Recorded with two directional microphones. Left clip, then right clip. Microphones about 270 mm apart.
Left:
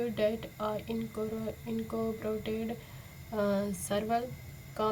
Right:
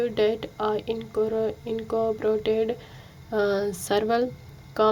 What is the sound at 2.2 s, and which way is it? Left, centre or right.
Speech, right.